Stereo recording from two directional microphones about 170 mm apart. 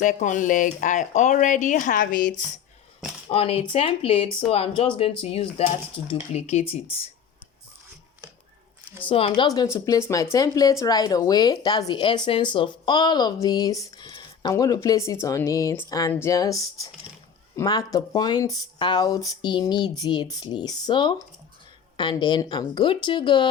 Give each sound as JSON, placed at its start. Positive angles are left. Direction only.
{"t": 0.0, "sound": "speech", "side_deg": 50}
{"t": 3.2, "sound": "speech", "side_deg": 35}
{"t": 9.0, "sound": "speech", "side_deg": 30}
{"t": 9.7, "sound": "speech", "side_deg": 15}